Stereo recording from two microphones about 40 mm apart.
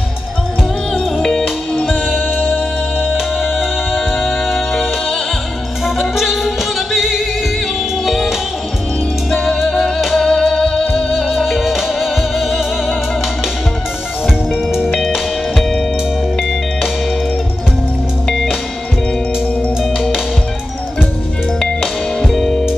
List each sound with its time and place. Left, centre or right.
1.2 s music: centre
1.9 s music: centre
9.3 s music: centre
11.1 s music: centre
15.1 s music: centre
19.8 s music: centre
22.2 s music: centre